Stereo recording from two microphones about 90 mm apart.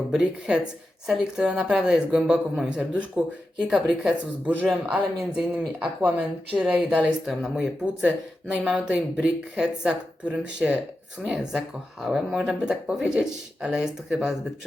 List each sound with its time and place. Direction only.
0.1 s speech: 5° right (ahead or behind)